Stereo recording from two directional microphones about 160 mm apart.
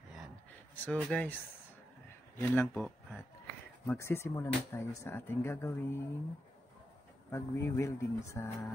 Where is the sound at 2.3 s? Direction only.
15° left (ahead or behind).